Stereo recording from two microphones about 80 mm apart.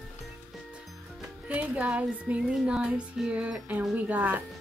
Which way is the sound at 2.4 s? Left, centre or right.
Centre.